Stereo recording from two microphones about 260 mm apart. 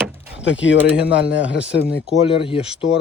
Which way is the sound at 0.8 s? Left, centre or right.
Centre.